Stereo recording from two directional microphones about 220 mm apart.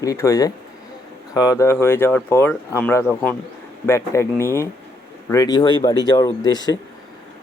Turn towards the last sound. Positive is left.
turn(degrees=20)  # may be behind; listen again after turning